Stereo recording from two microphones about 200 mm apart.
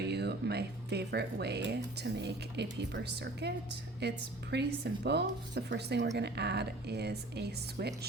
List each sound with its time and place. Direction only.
0.0 s speech: 55° right (ahead or behind)
4.5 s speech: 55° right (ahead or behind)